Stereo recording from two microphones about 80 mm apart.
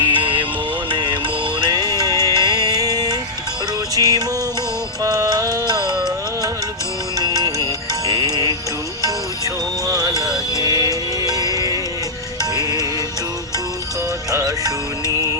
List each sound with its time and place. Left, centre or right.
0.0 s music: right
0.9 s music: right
1.6 s music: right
9.8 s music: right